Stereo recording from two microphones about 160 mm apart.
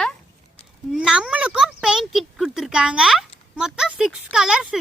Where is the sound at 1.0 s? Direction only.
5° right (ahead or behind).